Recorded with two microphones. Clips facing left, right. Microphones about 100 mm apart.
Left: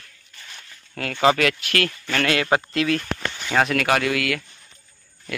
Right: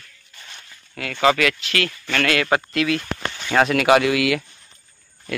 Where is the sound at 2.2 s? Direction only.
25° left (ahead or behind).